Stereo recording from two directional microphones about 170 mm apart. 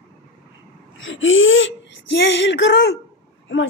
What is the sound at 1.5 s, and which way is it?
Speech, 90° left.